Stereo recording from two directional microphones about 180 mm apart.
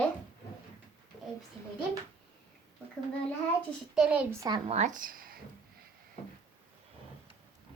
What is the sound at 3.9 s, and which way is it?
Speech, 10° right (ahead or behind).